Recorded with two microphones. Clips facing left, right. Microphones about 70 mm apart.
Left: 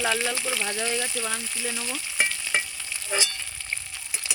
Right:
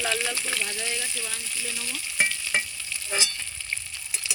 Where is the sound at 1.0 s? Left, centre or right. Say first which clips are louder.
Left 5 dB; left.